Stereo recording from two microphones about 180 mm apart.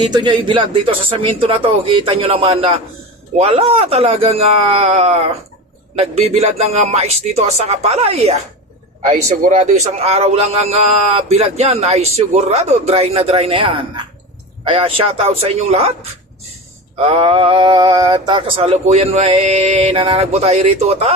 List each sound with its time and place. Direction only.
0.1 s a man's voice: 25° right (ahead or behind)
17.1 s a man's voice: 30° right (ahead or behind)